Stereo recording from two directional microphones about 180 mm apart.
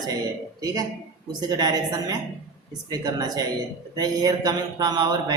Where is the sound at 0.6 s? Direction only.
20° right (ahead or behind).